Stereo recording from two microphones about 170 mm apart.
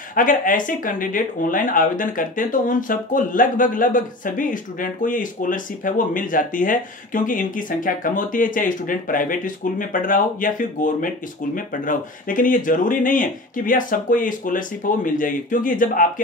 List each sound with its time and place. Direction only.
0.1 s speech: 50° left (ahead or behind)